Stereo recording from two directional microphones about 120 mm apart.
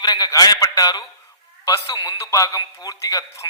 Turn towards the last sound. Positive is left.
turn(degrees=30)  # may be behind; listen again after turning